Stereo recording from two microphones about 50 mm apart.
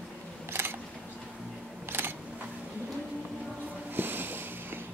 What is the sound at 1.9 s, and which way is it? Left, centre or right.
Camera, right.